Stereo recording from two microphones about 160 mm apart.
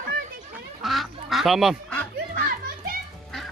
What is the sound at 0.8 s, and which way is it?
Goose, centre (ahead or behind).